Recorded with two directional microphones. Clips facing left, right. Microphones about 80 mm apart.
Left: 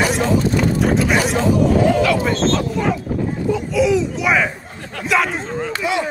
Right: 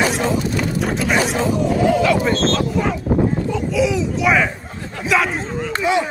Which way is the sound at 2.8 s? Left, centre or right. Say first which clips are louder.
Right 2 dB; centre.